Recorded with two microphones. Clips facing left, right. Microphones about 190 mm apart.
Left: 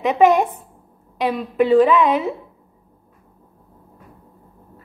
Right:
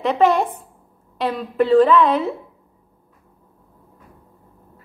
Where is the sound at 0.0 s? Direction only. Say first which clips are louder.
Left 2 dB; 10° left (ahead or behind).